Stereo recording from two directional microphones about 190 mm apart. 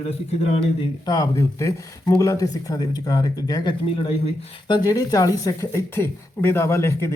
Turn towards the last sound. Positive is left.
turn(degrees=15)  # may be behind; listen again after turning